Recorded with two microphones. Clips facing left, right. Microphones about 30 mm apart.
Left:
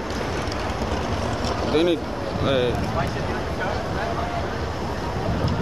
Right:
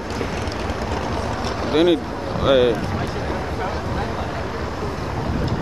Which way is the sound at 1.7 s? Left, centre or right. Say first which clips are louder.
Right 4 dB; right.